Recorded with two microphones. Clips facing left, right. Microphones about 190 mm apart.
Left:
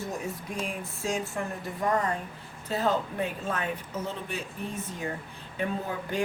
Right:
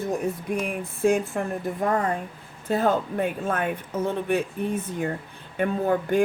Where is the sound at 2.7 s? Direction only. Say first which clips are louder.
Right 5 dB; 55° right (ahead or behind).